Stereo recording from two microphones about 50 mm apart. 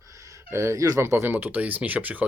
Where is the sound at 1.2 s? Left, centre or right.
Right.